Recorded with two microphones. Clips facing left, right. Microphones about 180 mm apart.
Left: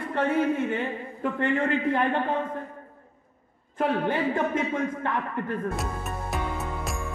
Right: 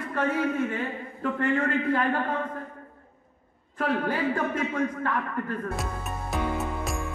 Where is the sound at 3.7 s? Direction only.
25° left (ahead or behind).